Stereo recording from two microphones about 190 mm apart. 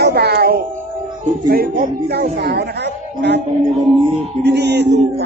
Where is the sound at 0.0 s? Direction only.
60° right (ahead or behind).